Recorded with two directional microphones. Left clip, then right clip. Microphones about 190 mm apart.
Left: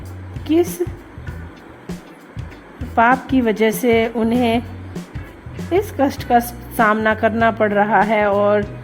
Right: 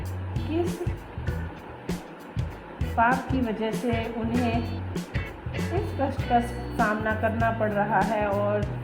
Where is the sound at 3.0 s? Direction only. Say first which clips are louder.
Left 9 dB; 40° left (ahead or behind).